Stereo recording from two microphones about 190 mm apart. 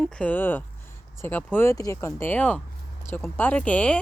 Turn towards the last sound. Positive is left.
turn(degrees=5)  # may be behind; listen again after turning